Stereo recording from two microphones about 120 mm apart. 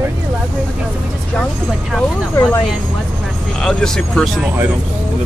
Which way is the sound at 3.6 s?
5° left (ahead or behind).